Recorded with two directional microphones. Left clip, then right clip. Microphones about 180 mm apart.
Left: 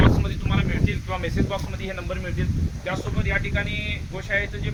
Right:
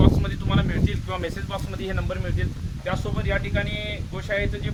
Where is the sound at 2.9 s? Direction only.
45° right (ahead or behind).